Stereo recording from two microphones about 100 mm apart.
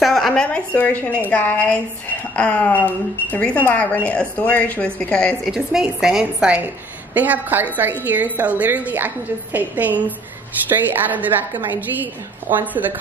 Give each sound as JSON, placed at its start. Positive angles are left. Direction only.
{"t": 0.0, "sound": "a woman's voice", "side_deg": 0}
{"t": 5.4, "sound": "a woman's voice", "side_deg": -5}